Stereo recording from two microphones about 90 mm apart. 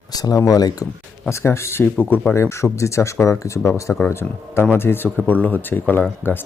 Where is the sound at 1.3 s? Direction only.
30° left (ahead or behind).